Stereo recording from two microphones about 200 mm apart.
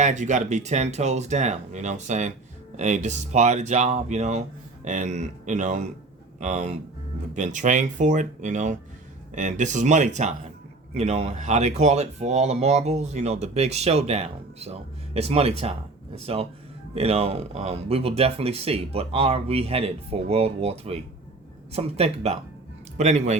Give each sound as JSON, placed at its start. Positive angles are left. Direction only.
{"t": 0.0, "sound": "speech", "side_deg": -35}